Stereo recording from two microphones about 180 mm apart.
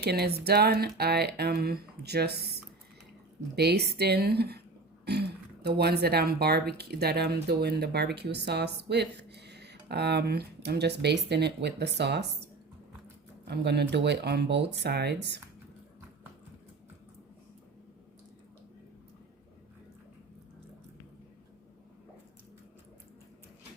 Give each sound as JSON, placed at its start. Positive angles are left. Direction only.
{"t": 0.0, "sound": "speech", "side_deg": -65}
{"t": 3.5, "sound": "speech", "side_deg": -65}
{"t": 13.5, "sound": "speech", "side_deg": -65}